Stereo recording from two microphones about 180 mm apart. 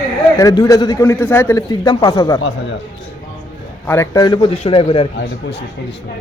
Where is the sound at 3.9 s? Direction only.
15° left (ahead or behind).